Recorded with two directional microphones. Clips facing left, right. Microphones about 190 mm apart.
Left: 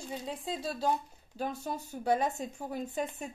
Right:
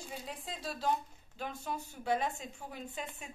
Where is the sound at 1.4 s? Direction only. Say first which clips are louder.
Left 4 dB; 40° left (ahead or behind).